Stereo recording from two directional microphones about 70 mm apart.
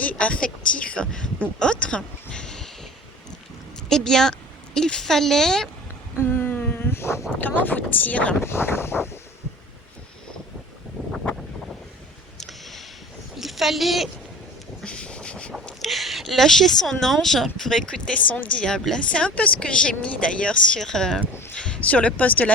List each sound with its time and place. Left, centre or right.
0.0 s speech: centre
3.8 s a woman's voice: centre
6.1 s a sound: left
7.3 s speech: left
8.4 s vehicle: left
11.0 s wind noise: left
12.4 s a sound: centre
13.3 s a woman's voice: centre
14.8 s a sound: centre
15.8 s speech: centre
18.3 s speech: left
18.6 s speech: centre